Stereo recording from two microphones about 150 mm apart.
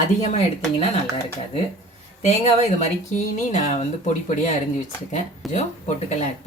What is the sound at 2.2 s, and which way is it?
Speech, 45° left (ahead or behind).